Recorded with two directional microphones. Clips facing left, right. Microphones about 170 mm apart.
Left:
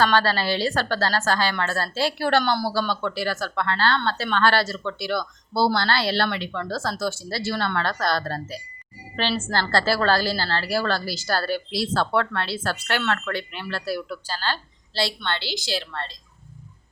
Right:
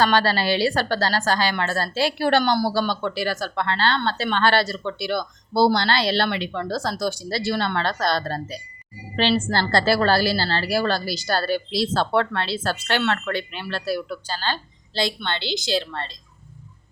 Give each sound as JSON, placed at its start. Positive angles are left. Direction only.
{"t": 0.0, "sound": "a woman's voice", "side_deg": -15}